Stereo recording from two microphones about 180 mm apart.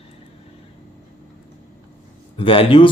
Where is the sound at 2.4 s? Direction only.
30° left (ahead or behind).